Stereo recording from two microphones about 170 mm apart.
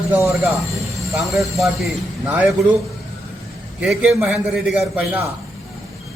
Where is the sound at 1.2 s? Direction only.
Centre (ahead or behind).